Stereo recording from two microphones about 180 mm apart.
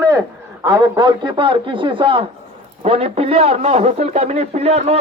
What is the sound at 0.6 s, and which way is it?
A man's voice, 20° right (ahead or behind).